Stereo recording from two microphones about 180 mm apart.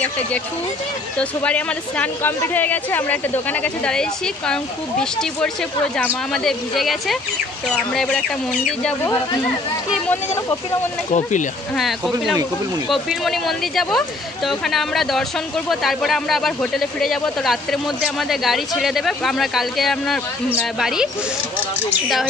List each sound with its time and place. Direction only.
1.4 s a woman's voice: 5° left (ahead or behind)
11.1 s speech: 45° left (ahead or behind)
11.7 s a woman's voice: centre (ahead or behind)